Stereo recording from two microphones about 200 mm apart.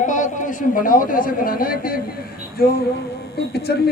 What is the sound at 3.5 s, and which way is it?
Speech, 55° left (ahead or behind).